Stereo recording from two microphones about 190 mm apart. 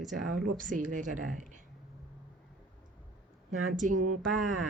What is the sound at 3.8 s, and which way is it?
Speech, 45° right (ahead or behind).